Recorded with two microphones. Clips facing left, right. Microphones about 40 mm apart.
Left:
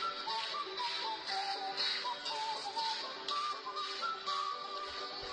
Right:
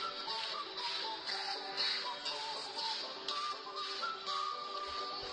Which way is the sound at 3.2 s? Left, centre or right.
Left.